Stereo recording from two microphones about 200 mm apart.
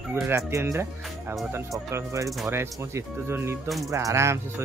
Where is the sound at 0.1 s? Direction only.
15° right (ahead or behind).